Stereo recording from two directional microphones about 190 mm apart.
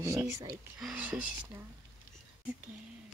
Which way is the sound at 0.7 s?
5° right (ahead or behind).